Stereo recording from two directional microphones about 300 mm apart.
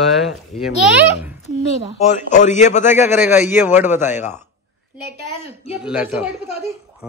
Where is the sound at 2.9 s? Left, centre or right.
Centre.